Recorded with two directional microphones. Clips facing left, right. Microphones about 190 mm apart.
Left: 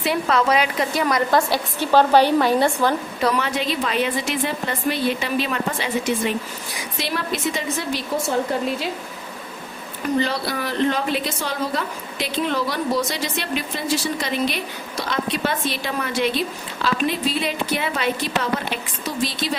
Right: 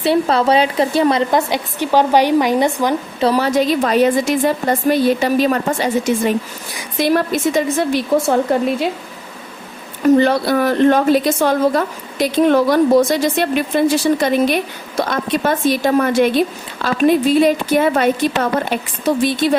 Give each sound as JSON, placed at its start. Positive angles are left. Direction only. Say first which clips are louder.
{"t": 0.0, "sound": "speech", "louder": "right 6 dB", "side_deg": -30}
{"t": 3.2, "sound": "a woman's voice", "louder": "right 8 dB", "side_deg": -35}
{"t": 10.2, "sound": "a woman's voice", "louder": "right 9 dB", "side_deg": -55}